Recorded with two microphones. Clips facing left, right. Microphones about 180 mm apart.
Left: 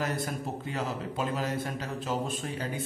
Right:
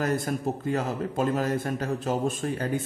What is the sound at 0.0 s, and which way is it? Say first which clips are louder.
A man's voice: right 6 dB; 45° right (ahead or behind).